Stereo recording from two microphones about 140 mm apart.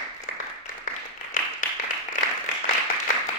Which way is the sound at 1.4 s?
70° left (ahead or behind).